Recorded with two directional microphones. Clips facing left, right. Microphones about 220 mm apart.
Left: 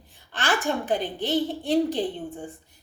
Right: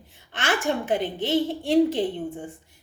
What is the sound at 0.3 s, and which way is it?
A woman's voice, 20° right (ahead or behind).